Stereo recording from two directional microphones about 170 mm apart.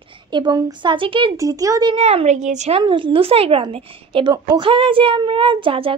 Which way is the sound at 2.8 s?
30° right (ahead or behind).